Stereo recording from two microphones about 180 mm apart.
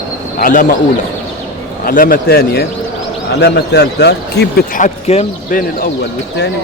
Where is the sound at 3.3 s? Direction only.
70° left (ahead or behind); by 4.9 s 55° left (ahead or behind).